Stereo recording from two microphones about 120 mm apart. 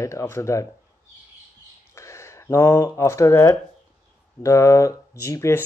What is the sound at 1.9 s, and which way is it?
Speech, 25° left (ahead or behind).